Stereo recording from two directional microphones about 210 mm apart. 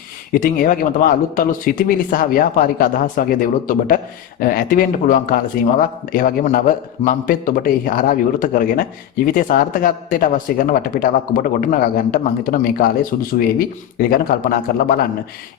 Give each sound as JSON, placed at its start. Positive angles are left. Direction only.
{"t": 0.3, "sound": "a man's voice", "side_deg": 40}